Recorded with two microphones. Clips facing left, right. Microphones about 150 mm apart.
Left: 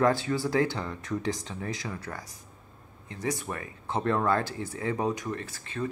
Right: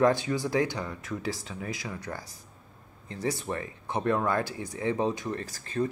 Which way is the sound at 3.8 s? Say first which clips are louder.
Left 1 dB; 15° right (ahead or behind).